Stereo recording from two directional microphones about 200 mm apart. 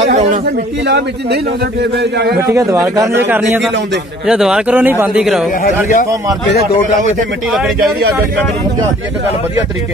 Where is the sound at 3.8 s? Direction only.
60° right (ahead or behind).